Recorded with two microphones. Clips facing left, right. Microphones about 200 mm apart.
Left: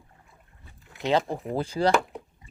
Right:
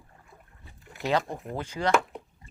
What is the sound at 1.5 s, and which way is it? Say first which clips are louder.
Speech: left 5 dB; 35° left (ahead or behind).